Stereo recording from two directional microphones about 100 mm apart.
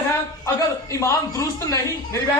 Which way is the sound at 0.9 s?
30° left (ahead or behind).